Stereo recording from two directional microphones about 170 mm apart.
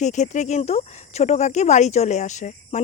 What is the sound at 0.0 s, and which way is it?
Speech, 45° left (ahead or behind).